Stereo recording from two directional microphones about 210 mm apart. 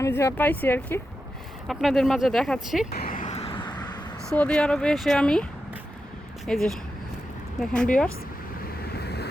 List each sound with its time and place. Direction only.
0.0 s speech: 15° left (ahead or behind)
2.9 s vehicle: 45° left (ahead or behind); by 3.7 s 25° left (ahead or behind)
4.3 s speech: 5° left (ahead or behind)
9.0 s vehicle: 50° left (ahead or behind)